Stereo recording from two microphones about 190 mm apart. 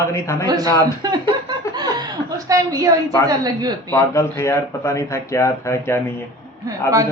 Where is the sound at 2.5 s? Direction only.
20° right (ahead or behind).